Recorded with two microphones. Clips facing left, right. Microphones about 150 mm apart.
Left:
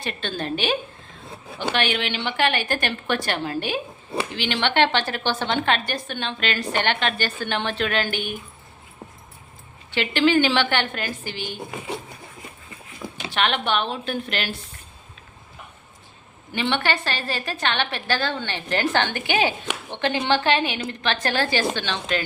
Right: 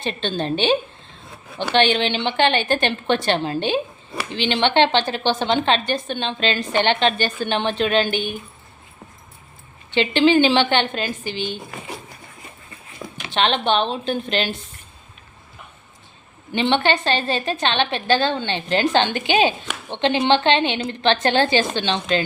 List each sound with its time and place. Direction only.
0.0 s speech: 25° right (ahead or behind)
9.9 s speech: 20° right (ahead or behind)
13.3 s speech: 25° right (ahead or behind)
16.5 s speech: 25° right (ahead or behind)